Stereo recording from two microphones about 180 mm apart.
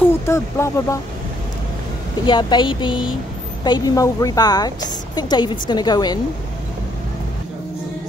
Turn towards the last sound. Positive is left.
turn(degrees=20)  # may be behind; listen again after turning